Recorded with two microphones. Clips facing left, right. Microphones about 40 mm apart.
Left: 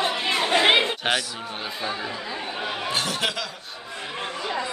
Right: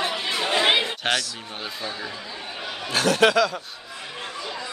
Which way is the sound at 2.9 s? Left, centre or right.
Right.